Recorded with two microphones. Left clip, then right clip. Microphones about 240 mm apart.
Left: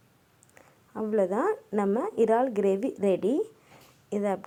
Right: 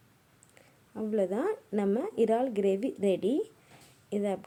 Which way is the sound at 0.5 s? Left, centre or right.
Centre.